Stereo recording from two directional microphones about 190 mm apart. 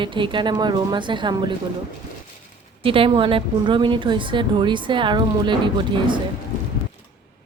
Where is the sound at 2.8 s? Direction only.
30° right (ahead or behind).